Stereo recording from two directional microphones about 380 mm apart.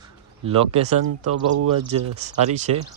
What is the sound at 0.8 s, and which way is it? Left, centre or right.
Speech, right.